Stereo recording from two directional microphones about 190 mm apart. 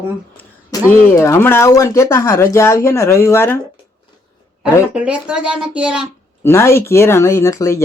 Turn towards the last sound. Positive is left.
turn(degrees=15)  # may be behind; listen again after turning